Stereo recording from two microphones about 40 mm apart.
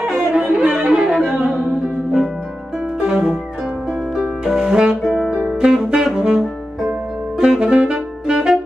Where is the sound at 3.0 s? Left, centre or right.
Centre.